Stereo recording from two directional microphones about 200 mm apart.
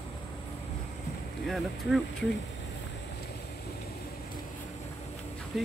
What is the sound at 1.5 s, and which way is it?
Speech, centre (ahead or behind).